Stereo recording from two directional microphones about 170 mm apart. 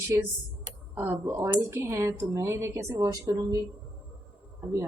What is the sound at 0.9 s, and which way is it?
Speech, 10° right (ahead or behind).